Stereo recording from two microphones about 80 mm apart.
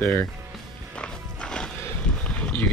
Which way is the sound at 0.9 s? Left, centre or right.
Centre.